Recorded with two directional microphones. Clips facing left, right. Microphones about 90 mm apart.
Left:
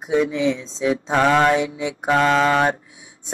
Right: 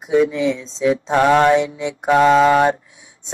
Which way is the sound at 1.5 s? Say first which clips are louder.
Right 3 dB; 30° right (ahead or behind).